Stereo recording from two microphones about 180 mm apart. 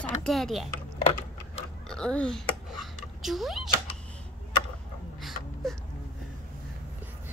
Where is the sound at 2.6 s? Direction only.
Centre (ahead or behind).